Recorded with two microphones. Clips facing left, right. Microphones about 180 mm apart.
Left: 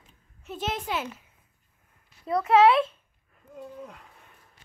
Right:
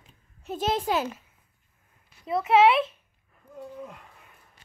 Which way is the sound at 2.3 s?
25° right (ahead or behind).